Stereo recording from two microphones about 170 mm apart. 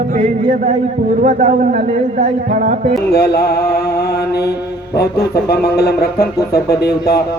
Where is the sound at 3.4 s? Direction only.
70° left (ahead or behind).